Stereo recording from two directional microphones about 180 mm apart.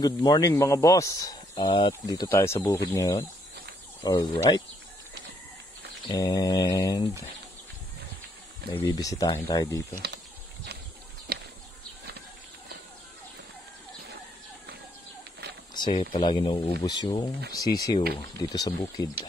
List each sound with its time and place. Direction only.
0.0 s speech: 20° left (ahead or behind)
2.0 s speech: 15° left (ahead or behind)
6.0 s speech: 20° left (ahead or behind)
8.7 s speech: 20° left (ahead or behind)
10.0 s a sound: 65° right (ahead or behind)
15.7 s speech: 25° left (ahead or behind)